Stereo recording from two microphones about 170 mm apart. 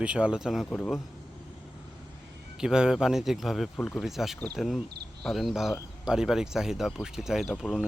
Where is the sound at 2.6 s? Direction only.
5° right (ahead or behind).